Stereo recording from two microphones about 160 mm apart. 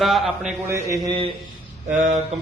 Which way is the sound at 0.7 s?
20° right (ahead or behind).